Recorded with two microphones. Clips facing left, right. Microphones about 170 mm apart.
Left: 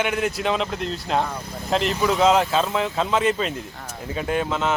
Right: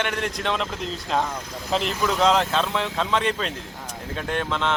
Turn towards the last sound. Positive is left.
turn(degrees=5)  # may be behind; listen again after turning